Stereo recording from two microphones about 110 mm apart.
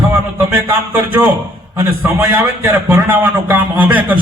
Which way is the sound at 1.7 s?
15° right (ahead or behind).